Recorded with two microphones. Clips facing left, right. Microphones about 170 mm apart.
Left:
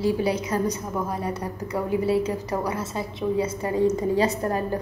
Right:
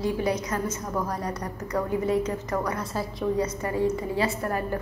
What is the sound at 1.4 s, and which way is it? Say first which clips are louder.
Speech: left 1 dB; 10° left (ahead or behind).